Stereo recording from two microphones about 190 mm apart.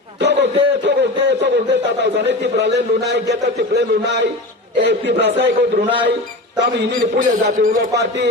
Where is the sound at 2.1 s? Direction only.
65° right (ahead or behind).